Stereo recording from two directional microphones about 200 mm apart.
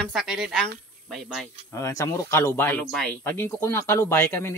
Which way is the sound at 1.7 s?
15° left (ahead or behind).